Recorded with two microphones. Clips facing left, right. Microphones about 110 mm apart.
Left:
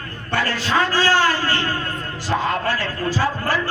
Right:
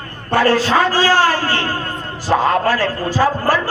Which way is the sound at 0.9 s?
40° right (ahead or behind).